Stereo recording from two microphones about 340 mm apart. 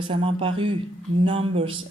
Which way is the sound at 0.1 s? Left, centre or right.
Centre.